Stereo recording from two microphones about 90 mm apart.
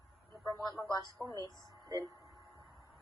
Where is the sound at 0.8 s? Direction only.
45° left (ahead or behind).